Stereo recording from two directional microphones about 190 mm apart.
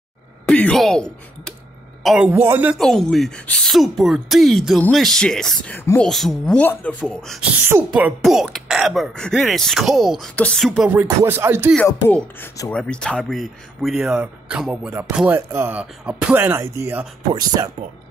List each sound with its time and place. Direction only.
0.5 s speech: 5° left (ahead or behind)
7.6 s speech: 10° right (ahead or behind)
10.9 s speech: 10° right (ahead or behind)
11.7 s speech: 5° left (ahead or behind); by 17.6 s 20° right (ahead or behind)